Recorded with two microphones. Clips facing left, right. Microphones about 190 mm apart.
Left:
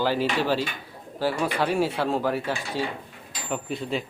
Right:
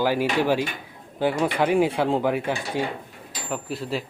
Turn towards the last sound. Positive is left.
turn(degrees=0)  # may be behind; listen again after turning